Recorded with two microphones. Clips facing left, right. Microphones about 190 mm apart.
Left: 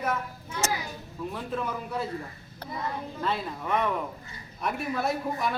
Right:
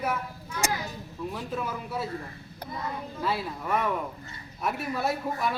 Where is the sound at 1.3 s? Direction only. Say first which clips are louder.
Left 2 dB; 5° right (ahead or behind).